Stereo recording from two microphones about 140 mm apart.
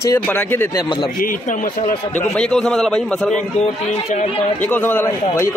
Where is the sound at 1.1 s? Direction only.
75° left (ahead or behind).